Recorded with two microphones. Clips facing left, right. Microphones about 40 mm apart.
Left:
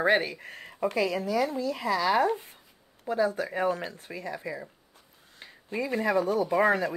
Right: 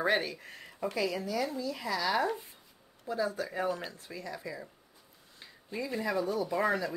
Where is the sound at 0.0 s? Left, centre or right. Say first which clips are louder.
Left 5 dB; left.